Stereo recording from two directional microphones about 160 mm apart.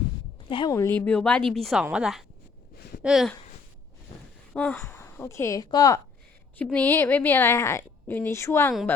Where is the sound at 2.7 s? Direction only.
75° left (ahead or behind).